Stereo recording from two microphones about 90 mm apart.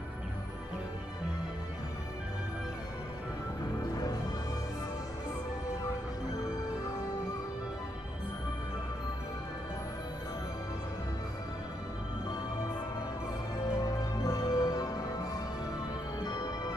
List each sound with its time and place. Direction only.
13.7 s music: 45° left (ahead or behind)